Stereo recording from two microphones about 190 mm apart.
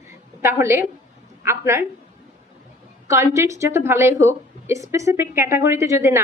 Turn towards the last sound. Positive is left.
turn(degrees=-15)  # may be behind; listen again after turning